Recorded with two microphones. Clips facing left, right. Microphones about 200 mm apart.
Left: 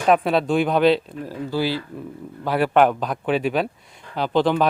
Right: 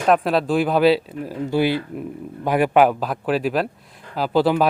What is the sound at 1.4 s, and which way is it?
Speech, 20° right (ahead or behind).